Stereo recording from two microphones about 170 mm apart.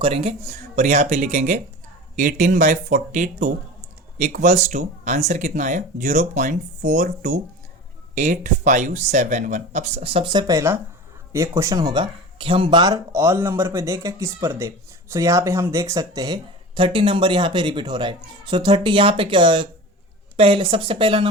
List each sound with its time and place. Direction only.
0.0 s speech: 35° right (ahead or behind)